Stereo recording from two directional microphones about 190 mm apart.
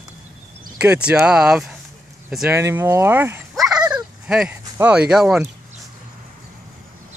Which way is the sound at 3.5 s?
5° right (ahead or behind).